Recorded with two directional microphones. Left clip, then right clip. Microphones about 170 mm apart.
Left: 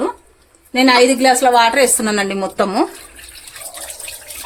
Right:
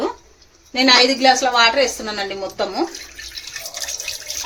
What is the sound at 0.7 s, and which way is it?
A woman's voice, 50° left (ahead or behind).